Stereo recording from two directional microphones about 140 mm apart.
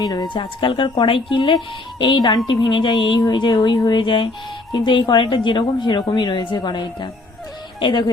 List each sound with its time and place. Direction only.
0.0 s speech: 30° left (ahead or behind)